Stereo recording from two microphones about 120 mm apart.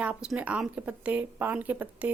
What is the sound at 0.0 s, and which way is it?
Speech, 10° right (ahead or behind).